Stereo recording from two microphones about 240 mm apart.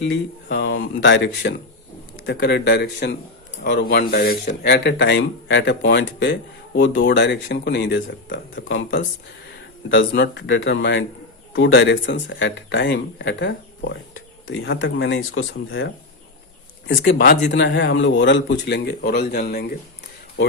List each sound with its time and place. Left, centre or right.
0.0 s speech: left
16.9 s speech: left